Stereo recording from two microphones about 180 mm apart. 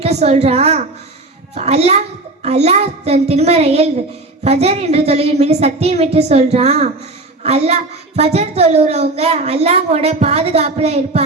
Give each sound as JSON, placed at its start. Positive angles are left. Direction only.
{"t": 0.0, "sound": "speech", "side_deg": -35}